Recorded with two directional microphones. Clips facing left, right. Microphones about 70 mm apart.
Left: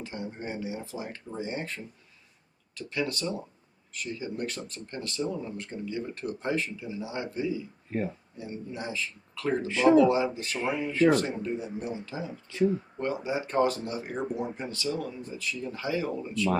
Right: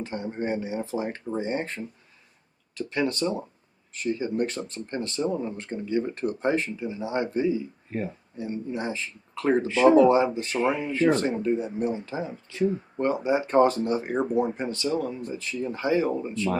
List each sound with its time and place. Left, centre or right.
0.0 s speech: right